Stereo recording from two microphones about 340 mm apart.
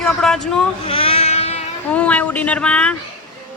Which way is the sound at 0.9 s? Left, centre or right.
Centre.